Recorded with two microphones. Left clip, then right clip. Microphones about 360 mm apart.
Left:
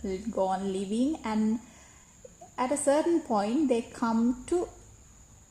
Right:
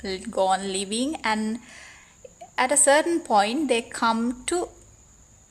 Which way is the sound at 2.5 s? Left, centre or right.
Right.